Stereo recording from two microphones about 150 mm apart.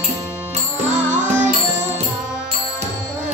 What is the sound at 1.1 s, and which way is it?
Music, 55° right (ahead or behind).